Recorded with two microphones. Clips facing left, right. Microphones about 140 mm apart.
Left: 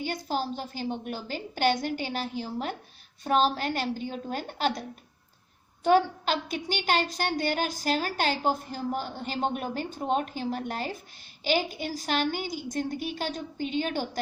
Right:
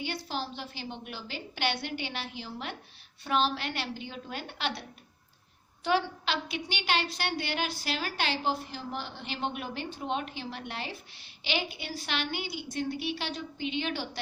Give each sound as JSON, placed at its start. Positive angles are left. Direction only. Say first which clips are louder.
{"t": 0.0, "sound": "a child's voice", "louder": "left 5 dB", "side_deg": 45}